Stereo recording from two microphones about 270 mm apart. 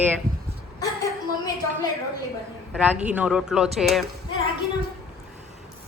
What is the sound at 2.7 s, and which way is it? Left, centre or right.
Speech, centre.